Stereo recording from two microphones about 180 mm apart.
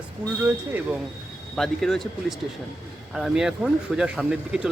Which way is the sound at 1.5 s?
Centre (ahead or behind).